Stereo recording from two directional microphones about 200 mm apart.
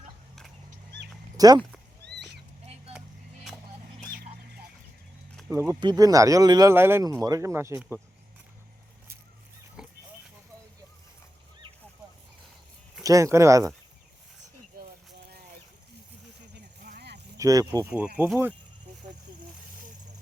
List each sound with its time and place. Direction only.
1.4 s speech: 20° right (ahead or behind)
2.1 s cat: 55° right (ahead or behind)
5.5 s speech: 15° right (ahead or behind)
9.8 s a sound: 5° right (ahead or behind)
13.0 s speech: 15° right (ahead or behind)
16.8 s a sound: 50° right (ahead or behind)
17.3 s speech: 15° right (ahead or behind)